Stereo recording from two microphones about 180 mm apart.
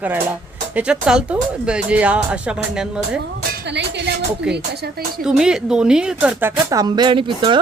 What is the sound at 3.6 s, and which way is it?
Music, 70° right (ahead or behind).